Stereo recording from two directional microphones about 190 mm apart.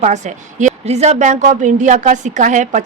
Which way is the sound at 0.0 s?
40° right (ahead or behind).